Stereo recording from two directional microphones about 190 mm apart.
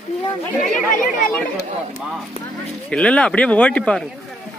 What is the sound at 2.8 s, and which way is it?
A man's voice, 5° left (ahead or behind).